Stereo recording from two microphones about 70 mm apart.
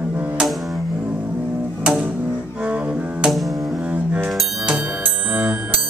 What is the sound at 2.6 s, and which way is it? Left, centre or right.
Double bass, centre.